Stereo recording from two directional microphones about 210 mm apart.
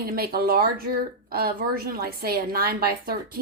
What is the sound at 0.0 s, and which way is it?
Speech, 45° right (ahead or behind).